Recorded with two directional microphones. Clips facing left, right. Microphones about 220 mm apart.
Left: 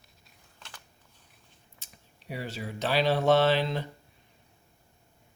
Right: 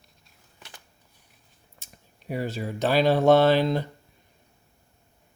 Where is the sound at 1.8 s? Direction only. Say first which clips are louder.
Right 7 dB; 50° right (ahead or behind).